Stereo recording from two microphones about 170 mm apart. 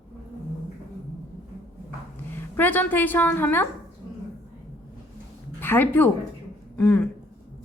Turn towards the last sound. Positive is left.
turn(degrees=10)  # may be behind; listen again after turning